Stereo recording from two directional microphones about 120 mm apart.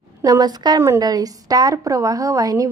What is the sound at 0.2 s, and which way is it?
A woman's voice, 30° right (ahead or behind).